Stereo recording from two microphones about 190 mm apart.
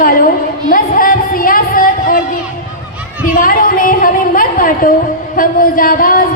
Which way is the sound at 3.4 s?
45° left (ahead or behind).